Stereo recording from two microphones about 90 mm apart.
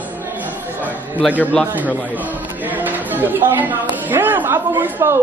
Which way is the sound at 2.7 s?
20° right (ahead or behind).